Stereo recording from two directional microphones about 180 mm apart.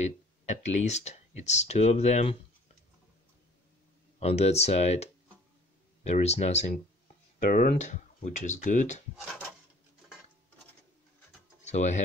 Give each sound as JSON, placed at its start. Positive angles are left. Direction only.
{"t": 0.0, "sound": "speech", "side_deg": 40}
{"t": 4.2, "sound": "speech", "side_deg": 35}
{"t": 7.3, "sound": "speech", "side_deg": 50}
{"t": 9.2, "sound": "a sound", "side_deg": 0}
{"t": 11.6, "sound": "speech", "side_deg": 40}